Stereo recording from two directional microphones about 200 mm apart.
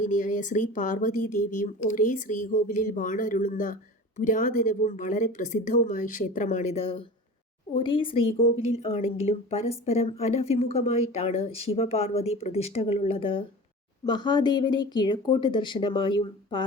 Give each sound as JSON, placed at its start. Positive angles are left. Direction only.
{"t": 0.0, "sound": "a woman's voice", "side_deg": 40}